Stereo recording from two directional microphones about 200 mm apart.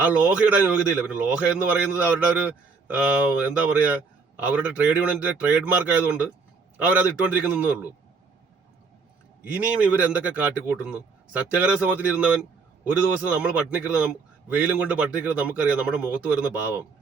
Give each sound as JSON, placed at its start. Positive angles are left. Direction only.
{"t": 0.0, "sound": "a man's voice", "side_deg": -5}
{"t": 7.4, "sound": "a man's voice", "side_deg": -5}
{"t": 9.4, "sound": "a man's voice", "side_deg": -5}